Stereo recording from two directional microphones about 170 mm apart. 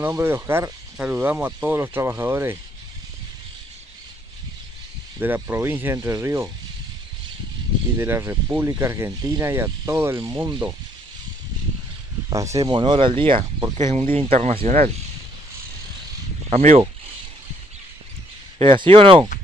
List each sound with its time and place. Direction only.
0.0 s speech: 15° right (ahead or behind)
5.2 s speech: 15° right (ahead or behind)
8.0 s speech: 15° right (ahead or behind)
12.3 s speech: 20° right (ahead or behind); by 14.9 s 35° right (ahead or behind)
16.4 s speech: 40° right (ahead or behind)
18.6 s speech: 30° right (ahead or behind)